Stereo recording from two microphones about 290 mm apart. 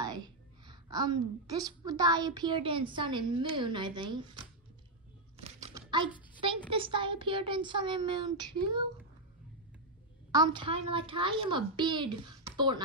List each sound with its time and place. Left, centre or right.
0.0 s a woman's voice: centre
5.4 s a sound: centre
6.7 s a child's voice: centre
10.3 s a child's voice: centre